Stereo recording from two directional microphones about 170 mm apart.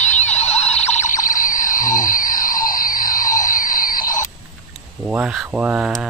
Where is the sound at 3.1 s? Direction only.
50° left (ahead or behind).